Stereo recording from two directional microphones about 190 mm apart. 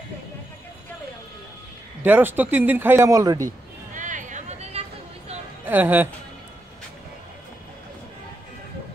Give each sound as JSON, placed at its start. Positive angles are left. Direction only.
{"t": 2.0, "sound": "speech", "side_deg": -10}
{"t": 3.4, "sound": "a sound", "side_deg": -40}
{"t": 5.7, "sound": "speech", "side_deg": -10}